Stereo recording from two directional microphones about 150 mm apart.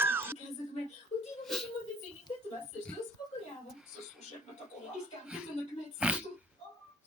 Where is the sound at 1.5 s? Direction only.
Centre (ahead or behind).